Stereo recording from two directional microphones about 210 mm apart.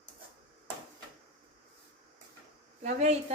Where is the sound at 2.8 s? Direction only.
30° right (ahead or behind).